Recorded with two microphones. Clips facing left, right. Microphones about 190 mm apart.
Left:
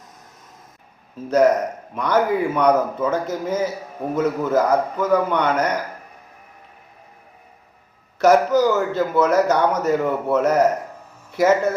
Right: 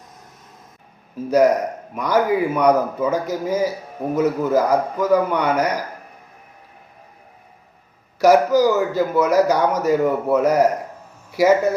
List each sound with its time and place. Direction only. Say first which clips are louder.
1.3 s a man's voice: right 1 dB; 10° right (ahead or behind)
8.2 s a man's voice: right 1 dB; 10° right (ahead or behind)